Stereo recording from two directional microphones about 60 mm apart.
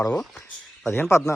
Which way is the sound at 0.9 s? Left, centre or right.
Left.